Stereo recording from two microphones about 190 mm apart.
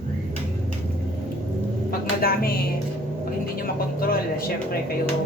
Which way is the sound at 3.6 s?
50° left (ahead or behind).